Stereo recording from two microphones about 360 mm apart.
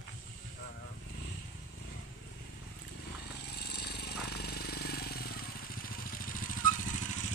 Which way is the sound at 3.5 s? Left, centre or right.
Left.